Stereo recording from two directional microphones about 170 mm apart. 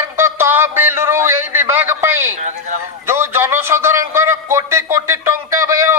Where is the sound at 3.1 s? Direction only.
15° right (ahead or behind).